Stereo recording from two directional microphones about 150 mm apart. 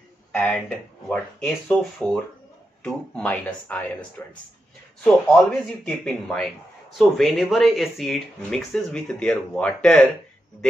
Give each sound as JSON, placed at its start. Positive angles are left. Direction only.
{"t": 0.3, "sound": "speech", "side_deg": 10}
{"t": 5.0, "sound": "speech", "side_deg": 5}